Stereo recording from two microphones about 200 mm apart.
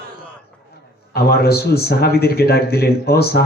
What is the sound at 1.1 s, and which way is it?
Speech, 50° left (ahead or behind).